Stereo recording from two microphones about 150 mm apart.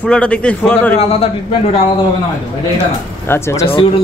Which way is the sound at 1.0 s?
40° left (ahead or behind).